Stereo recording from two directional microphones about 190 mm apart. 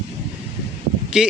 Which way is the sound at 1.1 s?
5° right (ahead or behind).